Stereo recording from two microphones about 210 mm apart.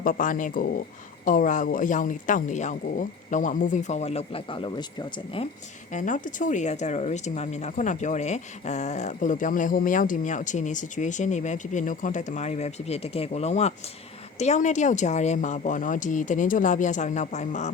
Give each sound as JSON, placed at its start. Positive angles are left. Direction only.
{"t": 0.0, "sound": "speech", "side_deg": 40}
{"t": 5.9, "sound": "speech", "side_deg": 35}